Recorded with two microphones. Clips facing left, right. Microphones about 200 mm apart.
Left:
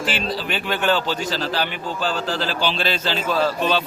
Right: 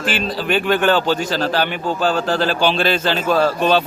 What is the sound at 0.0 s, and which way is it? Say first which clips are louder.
Speech: right 3 dB; 50° right (ahead or behind).